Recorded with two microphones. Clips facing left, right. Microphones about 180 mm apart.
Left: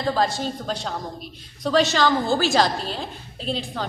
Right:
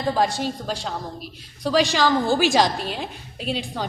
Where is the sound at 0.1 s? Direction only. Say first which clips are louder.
Right 1 dB; 15° right (ahead or behind).